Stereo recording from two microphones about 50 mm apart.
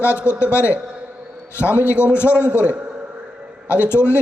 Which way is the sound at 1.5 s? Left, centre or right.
Left.